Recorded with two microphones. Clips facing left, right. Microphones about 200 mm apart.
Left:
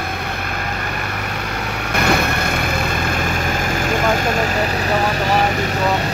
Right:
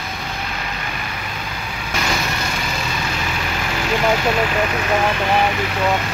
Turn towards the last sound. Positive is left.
turn(degrees=40)  # may be behind; listen again after turning